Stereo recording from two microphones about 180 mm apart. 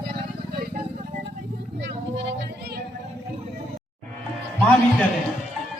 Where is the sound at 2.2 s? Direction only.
70° right (ahead or behind).